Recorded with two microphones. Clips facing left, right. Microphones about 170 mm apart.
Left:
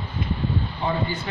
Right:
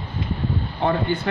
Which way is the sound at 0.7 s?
55° right (ahead or behind).